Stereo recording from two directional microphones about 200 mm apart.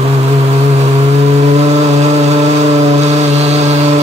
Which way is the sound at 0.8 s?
35° right (ahead or behind).